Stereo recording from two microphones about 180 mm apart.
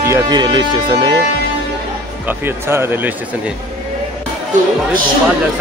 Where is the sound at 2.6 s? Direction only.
15° right (ahead or behind).